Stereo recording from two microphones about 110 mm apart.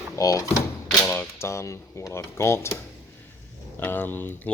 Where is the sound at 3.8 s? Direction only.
15° left (ahead or behind).